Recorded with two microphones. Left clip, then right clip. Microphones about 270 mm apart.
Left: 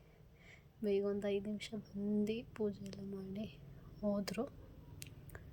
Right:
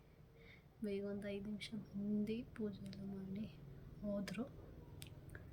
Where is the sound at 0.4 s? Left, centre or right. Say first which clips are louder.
Left 8 dB; centre.